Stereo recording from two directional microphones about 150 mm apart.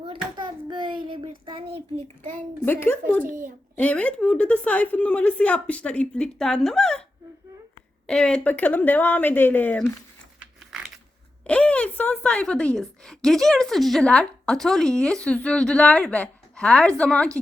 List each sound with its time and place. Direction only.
0.0 s hands: 35° right (ahead or behind)
1.5 s a sound: 35° right (ahead or behind)
2.6 s a woman's voice: 15° left (ahead or behind)
3.2 s a child's voice: 65° right (ahead or behind)
3.8 s a woman's voice: 10° left (ahead or behind)
8.0 s a woman's voice: 5° left (ahead or behind)
11.4 s a woman's voice: 10° left (ahead or behind)